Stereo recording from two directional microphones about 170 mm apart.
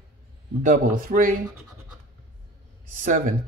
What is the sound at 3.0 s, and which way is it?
Speech, 50° right (ahead or behind).